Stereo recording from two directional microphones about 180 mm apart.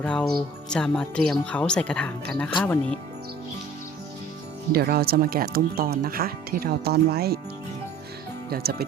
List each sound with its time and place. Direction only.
0.0 s speech: 5° left (ahead or behind)
4.7 s speech: 60° right (ahead or behind)
8.4 s speech: 60° right (ahead or behind)